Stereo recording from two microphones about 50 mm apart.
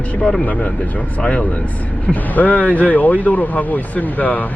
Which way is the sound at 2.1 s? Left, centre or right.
Left.